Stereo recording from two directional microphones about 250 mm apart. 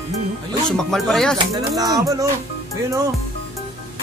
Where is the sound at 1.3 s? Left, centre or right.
Centre.